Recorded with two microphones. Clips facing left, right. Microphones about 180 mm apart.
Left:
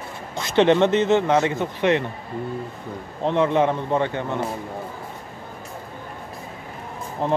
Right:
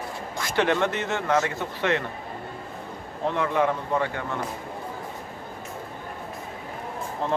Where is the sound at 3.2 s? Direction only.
20° left (ahead or behind).